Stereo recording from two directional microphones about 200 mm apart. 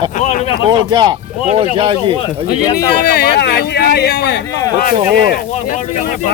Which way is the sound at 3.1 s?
55° left (ahead or behind).